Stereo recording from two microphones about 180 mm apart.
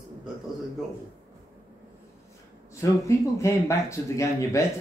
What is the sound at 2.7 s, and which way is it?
Speech, 15° left (ahead or behind).